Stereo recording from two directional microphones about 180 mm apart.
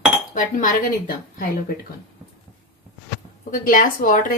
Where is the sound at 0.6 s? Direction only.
50° left (ahead or behind).